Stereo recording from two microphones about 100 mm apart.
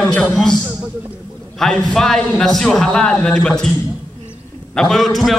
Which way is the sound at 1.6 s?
5° left (ahead or behind).